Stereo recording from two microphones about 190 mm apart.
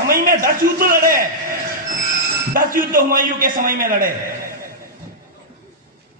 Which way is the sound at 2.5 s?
45° right (ahead or behind).